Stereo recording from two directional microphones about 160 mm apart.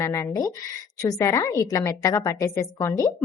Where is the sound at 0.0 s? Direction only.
20° left (ahead or behind).